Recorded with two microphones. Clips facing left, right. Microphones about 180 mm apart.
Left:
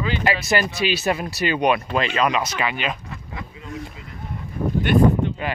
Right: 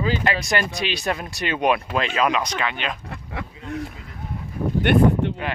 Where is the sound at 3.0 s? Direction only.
60° right (ahead or behind).